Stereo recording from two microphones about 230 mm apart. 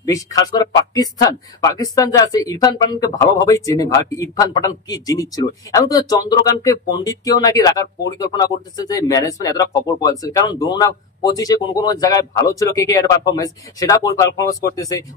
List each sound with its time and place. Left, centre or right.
0.0 s speech: centre